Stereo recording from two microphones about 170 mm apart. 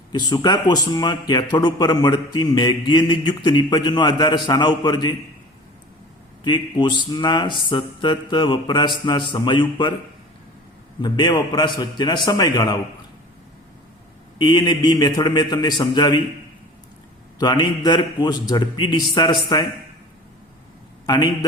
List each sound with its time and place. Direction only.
0.1 s a man's voice: 25° left (ahead or behind)
6.4 s a man's voice: 30° left (ahead or behind)
11.0 s a man's voice: 25° left (ahead or behind)
14.3 s a man's voice: 25° left (ahead or behind)
17.4 s a man's voice: 25° left (ahead or behind)
21.1 s a man's voice: 25° left (ahead or behind)